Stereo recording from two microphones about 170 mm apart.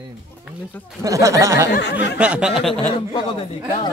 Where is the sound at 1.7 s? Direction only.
90° left.